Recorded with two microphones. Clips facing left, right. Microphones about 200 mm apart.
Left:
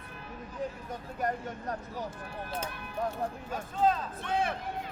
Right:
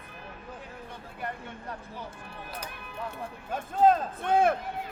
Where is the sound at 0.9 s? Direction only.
40° left (ahead or behind).